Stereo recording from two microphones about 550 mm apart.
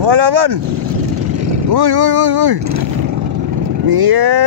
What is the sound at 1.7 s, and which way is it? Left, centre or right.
Speech, right.